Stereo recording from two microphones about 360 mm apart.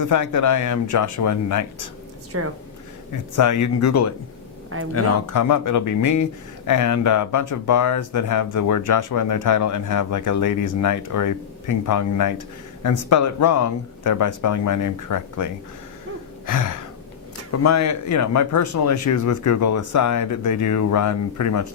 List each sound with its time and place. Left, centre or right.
0.0 s speech: left
2.3 s speech: right
3.1 s speech: left
4.7 s speech: right
5.2 s speech: left
16.5 s speech: left
17.6 s speech: left